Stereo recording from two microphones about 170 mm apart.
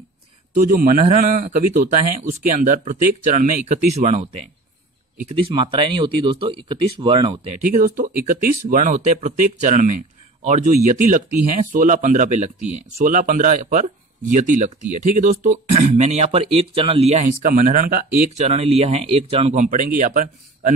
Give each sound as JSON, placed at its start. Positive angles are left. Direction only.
{"t": 0.6, "sound": "speech", "side_deg": -55}
{"t": 5.3, "sound": "speech", "side_deg": -30}
{"t": 7.6, "sound": "speech", "side_deg": -50}
{"t": 17.5, "sound": "speech", "side_deg": -50}
{"t": 18.3, "sound": "speech", "side_deg": -40}